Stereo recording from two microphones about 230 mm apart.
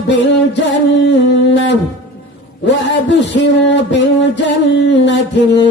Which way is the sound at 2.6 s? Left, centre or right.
Left.